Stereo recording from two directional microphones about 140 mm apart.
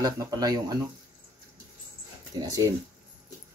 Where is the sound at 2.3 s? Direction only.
25° right (ahead or behind).